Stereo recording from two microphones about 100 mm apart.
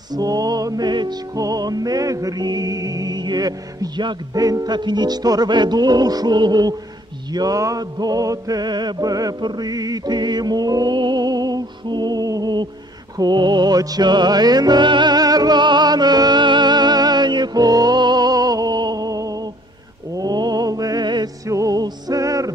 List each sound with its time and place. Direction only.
0.1 s music: 40° right (ahead or behind)
21.5 s music: 35° right (ahead or behind)